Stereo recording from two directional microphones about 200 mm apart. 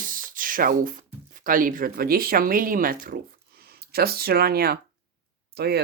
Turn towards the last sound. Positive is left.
turn(degrees=-50)  # may be behind; listen again after turning